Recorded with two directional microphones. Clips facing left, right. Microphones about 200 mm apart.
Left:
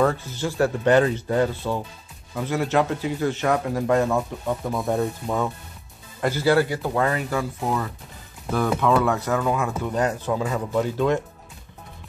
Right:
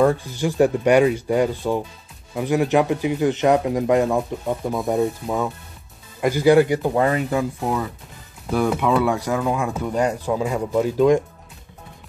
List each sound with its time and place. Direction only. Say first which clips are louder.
0.0 s speech: right 4 dB; 15° right (ahead or behind)
5.2 s speech: right 1 dB; 5° right (ahead or behind)
6.2 s speech: right 5 dB; 15° right (ahead or behind)
9.0 s speech: right 1 dB; 15° right (ahead or behind)